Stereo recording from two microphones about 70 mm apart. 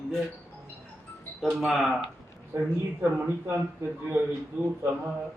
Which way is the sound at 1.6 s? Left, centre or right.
Centre.